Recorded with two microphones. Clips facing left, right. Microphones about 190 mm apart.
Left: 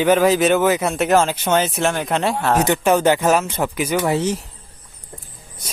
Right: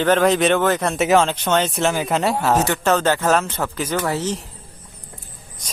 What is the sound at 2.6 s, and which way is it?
Speech, 15° left (ahead or behind).